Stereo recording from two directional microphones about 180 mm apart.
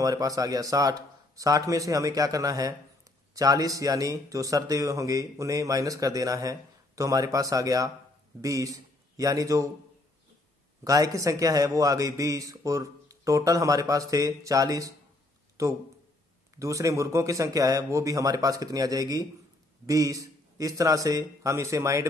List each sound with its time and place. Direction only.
0.0 s a man's voice: 20° right (ahead or behind)
10.8 s a man's voice: 20° right (ahead or behind)